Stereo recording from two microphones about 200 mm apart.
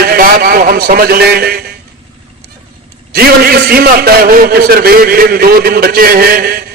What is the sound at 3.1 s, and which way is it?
A man's voice, 50° right (ahead or behind).